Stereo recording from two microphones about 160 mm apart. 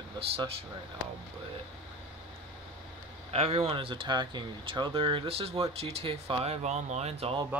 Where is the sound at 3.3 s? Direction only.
35° right (ahead or behind).